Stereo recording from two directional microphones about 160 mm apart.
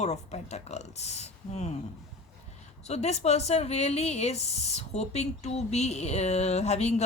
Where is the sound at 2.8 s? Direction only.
40° left (ahead or behind).